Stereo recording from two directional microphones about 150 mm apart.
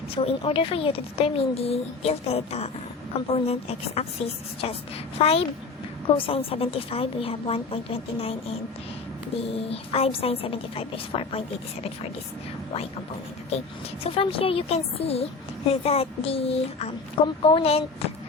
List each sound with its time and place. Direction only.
0.1 s a woman's voice: 40° left (ahead or behind)
5.1 s a woman's voice: 40° left (ahead or behind)
14.0 s a woman's voice: 40° left (ahead or behind)